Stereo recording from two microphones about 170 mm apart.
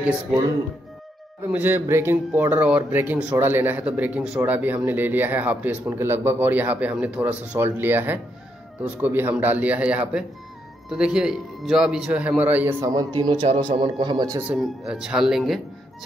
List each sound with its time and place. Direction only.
1.5 s a man's voice: 10° right (ahead or behind)
12.8 s speech: 25° right (ahead or behind)
14.4 s a man's voice: 5° right (ahead or behind)